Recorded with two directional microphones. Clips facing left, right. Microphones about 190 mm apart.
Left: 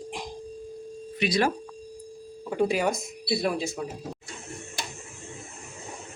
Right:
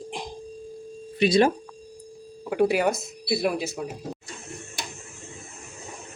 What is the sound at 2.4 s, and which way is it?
Speech, 5° right (ahead or behind).